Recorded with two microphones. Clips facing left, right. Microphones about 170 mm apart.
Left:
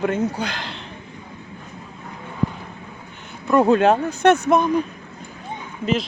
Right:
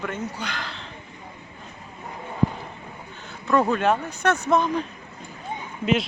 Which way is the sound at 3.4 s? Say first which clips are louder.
Left 4 dB; 15° left (ahead or behind).